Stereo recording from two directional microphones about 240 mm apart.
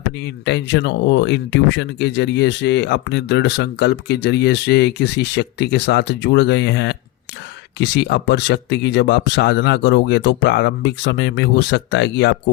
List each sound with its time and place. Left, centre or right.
0.2 s speech: left